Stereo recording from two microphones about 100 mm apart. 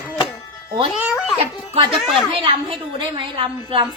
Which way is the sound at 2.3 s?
60° right (ahead or behind).